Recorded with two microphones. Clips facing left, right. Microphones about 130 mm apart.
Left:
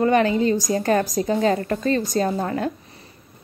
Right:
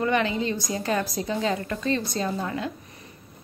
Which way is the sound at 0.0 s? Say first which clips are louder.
Left 6 dB; 40° left (ahead or behind).